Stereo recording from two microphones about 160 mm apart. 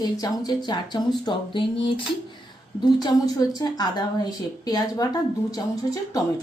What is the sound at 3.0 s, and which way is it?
A woman's voice, 25° left (ahead or behind).